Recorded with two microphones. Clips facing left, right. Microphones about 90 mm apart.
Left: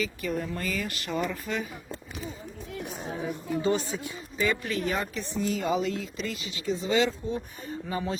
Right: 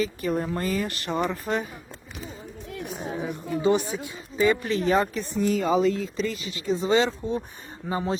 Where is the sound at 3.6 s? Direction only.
15° right (ahead or behind); by 6.6 s 40° right (ahead or behind).